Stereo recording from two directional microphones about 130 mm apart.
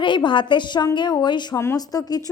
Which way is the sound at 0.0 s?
40° left (ahead or behind).